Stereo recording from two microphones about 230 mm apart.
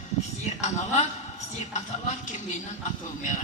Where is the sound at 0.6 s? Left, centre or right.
Left.